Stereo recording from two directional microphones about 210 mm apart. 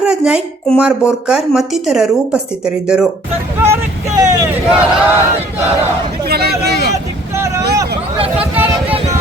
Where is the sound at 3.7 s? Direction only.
15° right (ahead or behind).